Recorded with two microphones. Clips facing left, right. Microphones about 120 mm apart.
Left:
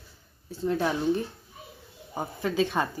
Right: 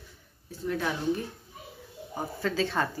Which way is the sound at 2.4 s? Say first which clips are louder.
Left 2 dB; 15° left (ahead or behind).